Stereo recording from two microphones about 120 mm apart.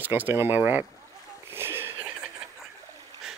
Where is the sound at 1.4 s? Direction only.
20° right (ahead or behind).